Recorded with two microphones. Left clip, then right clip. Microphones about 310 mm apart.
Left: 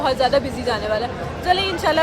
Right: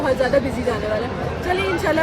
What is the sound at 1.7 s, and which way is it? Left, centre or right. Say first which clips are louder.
Speech: left 1 dB; centre.